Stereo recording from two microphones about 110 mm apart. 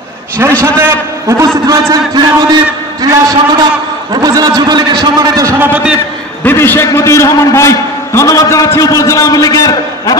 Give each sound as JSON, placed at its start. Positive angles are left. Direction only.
{"t": 0.4, "sound": "a man's voice", "side_deg": -25}
{"t": 5.7, "sound": "a man's voice", "side_deg": -10}
{"t": 6.4, "sound": "a man's voice", "side_deg": 20}